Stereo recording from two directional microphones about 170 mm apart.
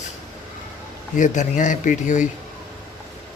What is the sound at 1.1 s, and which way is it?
Speech, 50° left (ahead or behind).